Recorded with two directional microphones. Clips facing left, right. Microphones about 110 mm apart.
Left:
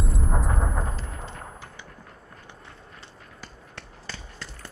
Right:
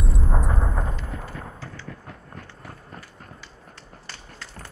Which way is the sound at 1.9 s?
70° right (ahead or behind).